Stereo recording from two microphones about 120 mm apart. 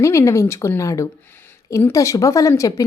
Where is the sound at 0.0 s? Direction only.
25° left (ahead or behind).